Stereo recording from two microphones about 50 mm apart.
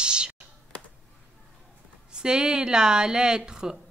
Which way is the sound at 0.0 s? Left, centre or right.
Centre.